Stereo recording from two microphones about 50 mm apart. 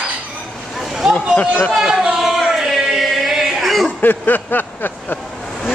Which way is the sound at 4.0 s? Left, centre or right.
Left.